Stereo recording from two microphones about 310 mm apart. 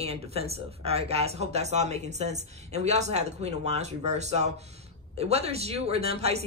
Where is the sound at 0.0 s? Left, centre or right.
Centre.